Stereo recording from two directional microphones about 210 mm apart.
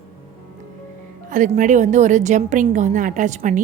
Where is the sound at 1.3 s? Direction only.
35° right (ahead or behind).